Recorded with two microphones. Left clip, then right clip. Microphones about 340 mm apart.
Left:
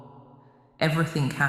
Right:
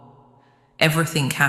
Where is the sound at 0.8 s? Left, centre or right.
Right.